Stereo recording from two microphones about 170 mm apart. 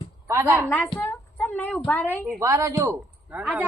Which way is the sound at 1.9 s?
10° left (ahead or behind).